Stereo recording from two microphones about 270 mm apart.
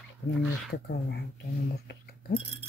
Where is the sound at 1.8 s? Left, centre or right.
Left.